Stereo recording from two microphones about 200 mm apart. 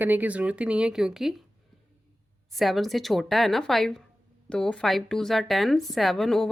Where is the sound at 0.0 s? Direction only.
10° right (ahead or behind).